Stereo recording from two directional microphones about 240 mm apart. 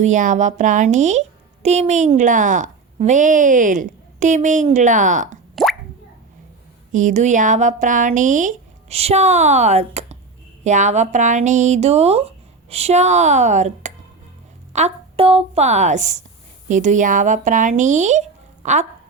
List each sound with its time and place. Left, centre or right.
0.0 s a woman's voice: right
6.9 s a woman's voice: right